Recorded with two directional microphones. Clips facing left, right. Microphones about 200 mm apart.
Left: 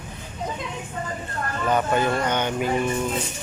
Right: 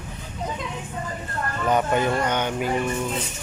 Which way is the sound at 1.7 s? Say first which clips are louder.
Even; 15° right (ahead or behind).